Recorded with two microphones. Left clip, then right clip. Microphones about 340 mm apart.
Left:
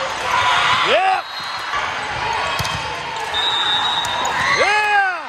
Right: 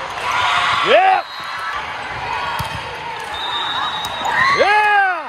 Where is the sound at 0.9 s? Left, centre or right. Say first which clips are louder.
Right 4 dB; right.